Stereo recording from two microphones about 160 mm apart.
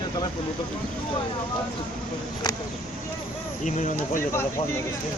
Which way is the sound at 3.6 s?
55° left (ahead or behind).